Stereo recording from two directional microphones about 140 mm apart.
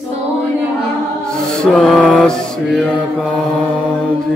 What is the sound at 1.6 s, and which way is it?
Mantra, centre (ahead or behind).